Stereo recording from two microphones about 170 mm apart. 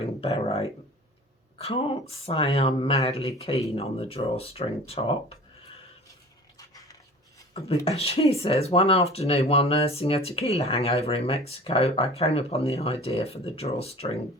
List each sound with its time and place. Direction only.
0.0 s speech: 35° left (ahead or behind)
6.6 s dog: 20° left (ahead or behind)
7.9 s speech: 35° left (ahead or behind)